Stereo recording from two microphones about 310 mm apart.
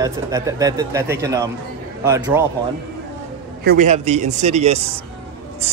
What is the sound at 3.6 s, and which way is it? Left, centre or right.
A man's voice, right.